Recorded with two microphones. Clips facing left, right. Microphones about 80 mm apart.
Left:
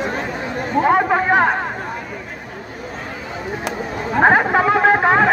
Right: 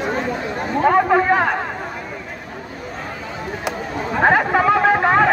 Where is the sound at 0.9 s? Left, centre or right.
Left.